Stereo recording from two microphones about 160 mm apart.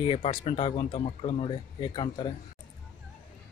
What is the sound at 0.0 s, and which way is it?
Speech, 35° left (ahead or behind).